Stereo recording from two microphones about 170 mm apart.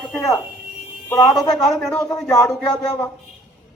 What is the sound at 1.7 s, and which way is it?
Speech, 5° left (ahead or behind).